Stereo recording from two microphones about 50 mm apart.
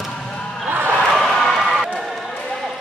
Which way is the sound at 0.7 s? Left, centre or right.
Right.